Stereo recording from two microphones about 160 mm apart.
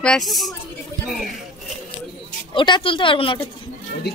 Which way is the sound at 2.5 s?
30° left (ahead or behind).